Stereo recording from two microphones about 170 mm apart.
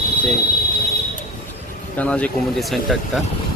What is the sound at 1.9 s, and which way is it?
Speech, 10° left (ahead or behind).